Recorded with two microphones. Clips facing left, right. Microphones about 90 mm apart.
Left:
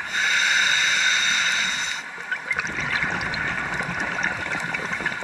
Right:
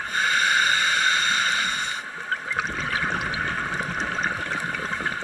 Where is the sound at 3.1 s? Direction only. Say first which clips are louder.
Even; 20° left (ahead or behind).